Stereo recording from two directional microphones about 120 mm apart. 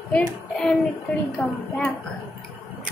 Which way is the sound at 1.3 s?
5° left (ahead or behind).